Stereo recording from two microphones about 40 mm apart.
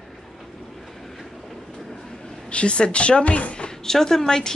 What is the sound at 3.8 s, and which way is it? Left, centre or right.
Speech, centre.